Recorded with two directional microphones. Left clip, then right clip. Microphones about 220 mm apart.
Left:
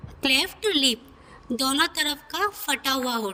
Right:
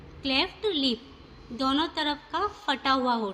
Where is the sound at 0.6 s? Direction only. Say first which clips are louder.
Left 5 dB; 60° left (ahead or behind).